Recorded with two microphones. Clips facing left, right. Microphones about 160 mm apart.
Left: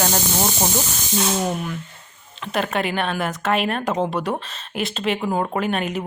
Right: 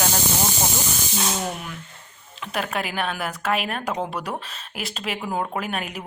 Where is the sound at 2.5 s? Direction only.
5° right (ahead or behind).